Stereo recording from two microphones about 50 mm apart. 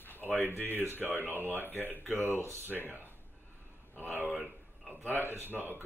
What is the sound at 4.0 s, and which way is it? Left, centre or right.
Speech, right.